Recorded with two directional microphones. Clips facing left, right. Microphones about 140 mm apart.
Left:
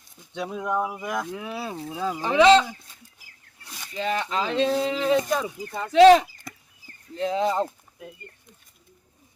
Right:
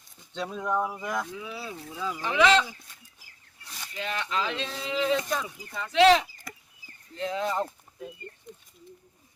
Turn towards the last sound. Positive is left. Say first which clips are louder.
# left 6 dB
turn(degrees=30)  # may be behind; listen again after turning